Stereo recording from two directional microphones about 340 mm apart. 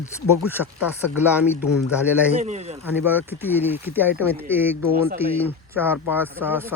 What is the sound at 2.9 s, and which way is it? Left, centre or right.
Speech, centre.